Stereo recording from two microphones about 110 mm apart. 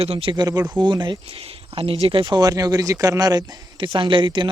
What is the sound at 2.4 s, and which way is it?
Speech, 35° right (ahead or behind).